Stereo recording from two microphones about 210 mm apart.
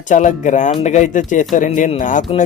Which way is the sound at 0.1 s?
35° left (ahead or behind).